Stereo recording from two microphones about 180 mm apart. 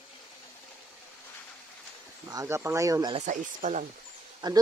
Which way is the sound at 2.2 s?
15° right (ahead or behind).